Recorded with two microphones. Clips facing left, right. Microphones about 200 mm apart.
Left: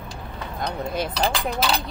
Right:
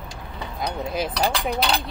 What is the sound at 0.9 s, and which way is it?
Speech, centre (ahead or behind).